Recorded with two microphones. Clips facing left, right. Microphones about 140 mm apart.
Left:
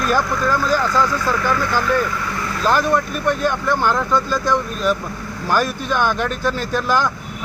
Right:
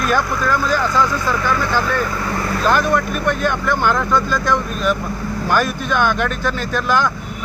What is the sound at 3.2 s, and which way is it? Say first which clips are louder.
Speech: even; 35° left (ahead or behind).